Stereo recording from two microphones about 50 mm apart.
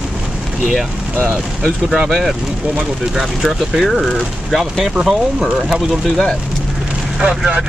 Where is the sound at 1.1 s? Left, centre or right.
Right.